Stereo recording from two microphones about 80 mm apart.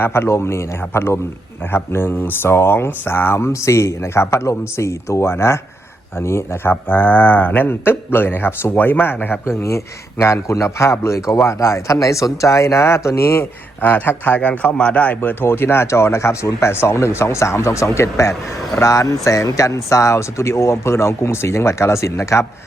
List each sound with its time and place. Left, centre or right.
0.0 s a man's voice: left